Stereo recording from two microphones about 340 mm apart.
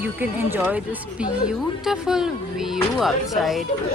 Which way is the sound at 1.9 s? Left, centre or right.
Centre.